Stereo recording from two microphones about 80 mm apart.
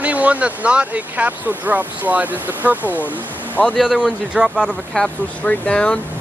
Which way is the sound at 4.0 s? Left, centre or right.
Centre.